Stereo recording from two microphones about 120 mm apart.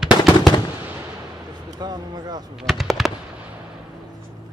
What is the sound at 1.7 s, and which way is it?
Speech, 35° right (ahead or behind).